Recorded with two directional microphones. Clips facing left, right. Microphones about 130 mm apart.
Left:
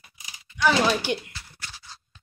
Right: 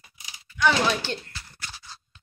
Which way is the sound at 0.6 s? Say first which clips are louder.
Left 2 dB; 10° left (ahead or behind).